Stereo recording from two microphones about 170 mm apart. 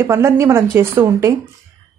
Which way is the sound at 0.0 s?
15° right (ahead or behind).